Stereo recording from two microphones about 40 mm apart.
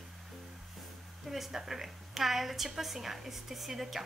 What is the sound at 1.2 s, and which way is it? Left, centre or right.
A woman's voice, centre.